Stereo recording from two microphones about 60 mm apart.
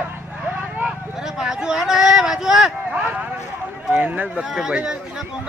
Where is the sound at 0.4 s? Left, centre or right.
Right.